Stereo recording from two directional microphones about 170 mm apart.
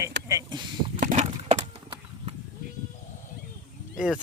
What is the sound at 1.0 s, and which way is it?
Wood, 45° right (ahead or behind).